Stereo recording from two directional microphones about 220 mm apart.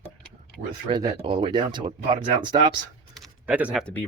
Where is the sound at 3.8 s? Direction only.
5° left (ahead or behind).